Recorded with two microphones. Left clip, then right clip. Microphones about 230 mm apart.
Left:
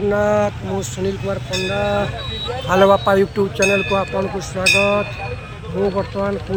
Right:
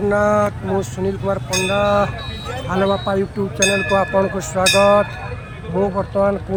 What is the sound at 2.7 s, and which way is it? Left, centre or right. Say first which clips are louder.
Speech: left 6 dB; centre.